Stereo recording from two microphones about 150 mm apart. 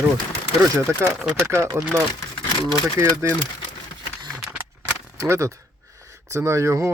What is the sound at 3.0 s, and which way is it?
Speech, 15° right (ahead or behind).